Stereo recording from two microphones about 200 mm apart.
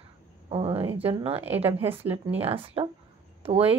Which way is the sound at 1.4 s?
10° right (ahead or behind).